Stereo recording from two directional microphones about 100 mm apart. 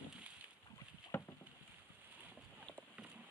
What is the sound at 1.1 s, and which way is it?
Boat, 25° left (ahead or behind).